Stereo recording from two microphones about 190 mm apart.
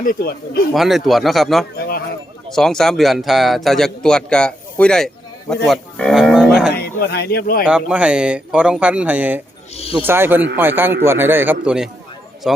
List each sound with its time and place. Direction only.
0.0 s speech: 50° left (ahead or behind)
0.7 s speech: centre (ahead or behind)
1.7 s speech: 55° left (ahead or behind)
2.5 s speech: centre (ahead or behind)
6.7 s speech: 55° left (ahead or behind)
7.6 s speech: 5° right (ahead or behind)